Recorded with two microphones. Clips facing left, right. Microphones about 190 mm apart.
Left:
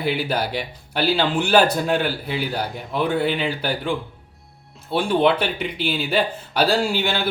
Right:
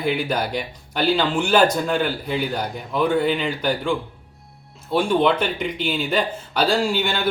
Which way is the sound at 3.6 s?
35° left (ahead or behind).